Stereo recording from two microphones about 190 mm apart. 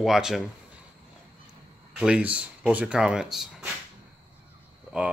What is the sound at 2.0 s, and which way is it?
Speech, 5° right (ahead or behind).